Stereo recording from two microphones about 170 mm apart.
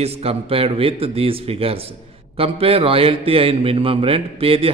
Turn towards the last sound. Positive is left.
turn(degrees=-35)  # may be behind; listen again after turning